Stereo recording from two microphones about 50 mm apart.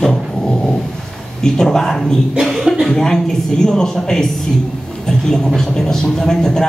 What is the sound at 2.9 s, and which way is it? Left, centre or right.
Speech, centre.